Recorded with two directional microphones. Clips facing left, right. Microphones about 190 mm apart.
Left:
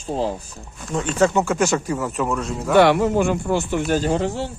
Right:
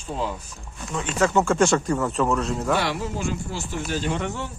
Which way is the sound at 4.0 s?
35° left (ahead or behind).